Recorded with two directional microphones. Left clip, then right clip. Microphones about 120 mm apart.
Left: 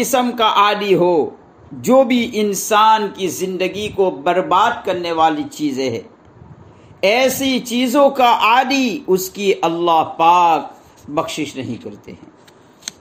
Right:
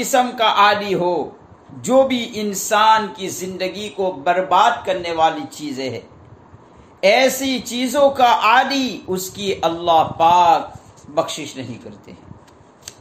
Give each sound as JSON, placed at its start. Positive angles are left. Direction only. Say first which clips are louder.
{"t": 0.0, "sound": "a man's voice", "louder": "left 1 dB", "side_deg": 70}
{"t": 7.0, "sound": "a man's voice", "louder": "even", "side_deg": 65}